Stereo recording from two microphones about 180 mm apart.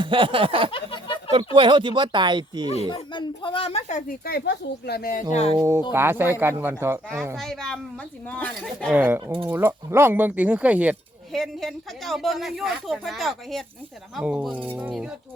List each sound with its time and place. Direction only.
0.0 s speech: 30° right (ahead or behind)
0.7 s a sound: 30° left (ahead or behind)
1.5 s speech: 25° right (ahead or behind)
2.6 s speech: 35° left (ahead or behind)
4.3 s speech: 60° left (ahead or behind)
5.3 s speech: 35° left (ahead or behind)
5.5 s speech: 15° right (ahead or behind)
7.3 s a woman's voice: centre (ahead or behind)
8.9 s speech: 10° right (ahead or behind)